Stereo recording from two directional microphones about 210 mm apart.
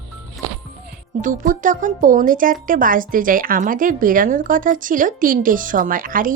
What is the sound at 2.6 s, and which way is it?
A woman's voice, 40° right (ahead or behind).